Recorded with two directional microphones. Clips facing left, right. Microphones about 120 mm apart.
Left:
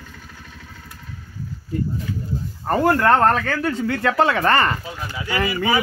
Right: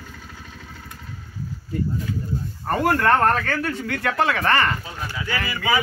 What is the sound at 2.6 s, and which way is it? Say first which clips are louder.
Speech: left 3 dB; 25° left (ahead or behind).